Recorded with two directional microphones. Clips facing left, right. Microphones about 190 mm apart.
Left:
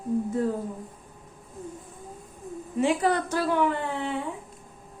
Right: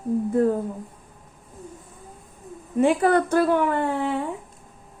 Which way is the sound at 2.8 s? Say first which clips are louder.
Right 5 dB; 55° right (ahead or behind).